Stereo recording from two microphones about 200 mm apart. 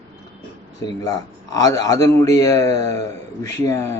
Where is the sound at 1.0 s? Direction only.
20° left (ahead or behind).